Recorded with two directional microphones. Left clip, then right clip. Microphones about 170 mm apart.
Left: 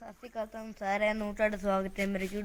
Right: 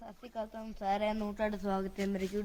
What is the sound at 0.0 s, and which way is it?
Speech, 5° left (ahead or behind).